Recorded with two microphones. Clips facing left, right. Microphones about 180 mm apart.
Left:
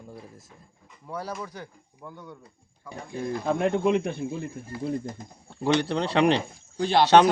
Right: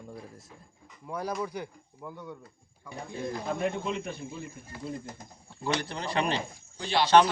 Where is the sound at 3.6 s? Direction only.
60° left (ahead or behind).